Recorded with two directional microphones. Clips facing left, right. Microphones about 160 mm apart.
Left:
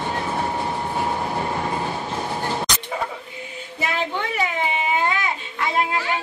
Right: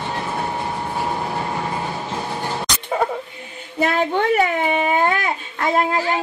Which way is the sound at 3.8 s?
50° right (ahead or behind).